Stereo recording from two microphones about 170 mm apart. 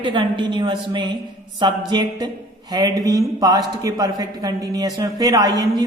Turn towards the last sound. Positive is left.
turn(degrees=-20)  # may be behind; listen again after turning